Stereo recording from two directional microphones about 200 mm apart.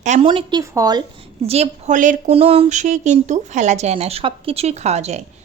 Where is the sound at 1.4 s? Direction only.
30° right (ahead or behind).